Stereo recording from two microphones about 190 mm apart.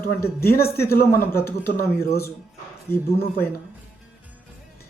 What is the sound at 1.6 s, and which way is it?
Speech, 55° left (ahead or behind).